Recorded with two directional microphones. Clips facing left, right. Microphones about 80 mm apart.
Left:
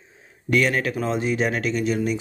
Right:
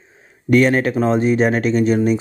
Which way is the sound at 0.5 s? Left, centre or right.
Right.